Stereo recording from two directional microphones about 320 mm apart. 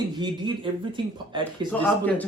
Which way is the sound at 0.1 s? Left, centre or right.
Centre.